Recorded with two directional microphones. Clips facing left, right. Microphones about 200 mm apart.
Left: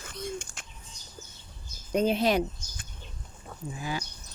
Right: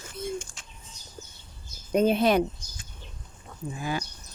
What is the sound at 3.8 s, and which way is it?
Speech, 55° right (ahead or behind).